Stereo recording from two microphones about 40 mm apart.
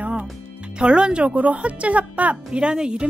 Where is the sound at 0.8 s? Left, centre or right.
Right.